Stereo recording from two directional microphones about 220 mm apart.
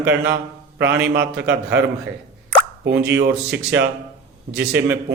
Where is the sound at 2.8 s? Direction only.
50° right (ahead or behind).